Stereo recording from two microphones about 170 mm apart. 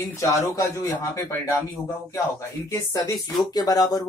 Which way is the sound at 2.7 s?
20° left (ahead or behind).